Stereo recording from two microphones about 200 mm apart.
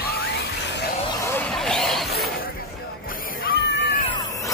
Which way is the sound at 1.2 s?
10° left (ahead or behind).